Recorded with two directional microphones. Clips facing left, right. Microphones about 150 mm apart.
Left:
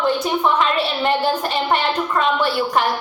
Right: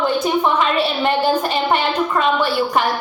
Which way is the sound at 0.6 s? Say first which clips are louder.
Right 2 dB; centre (ahead or behind).